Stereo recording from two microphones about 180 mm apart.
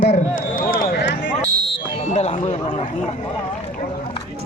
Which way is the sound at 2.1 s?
35° left (ahead or behind).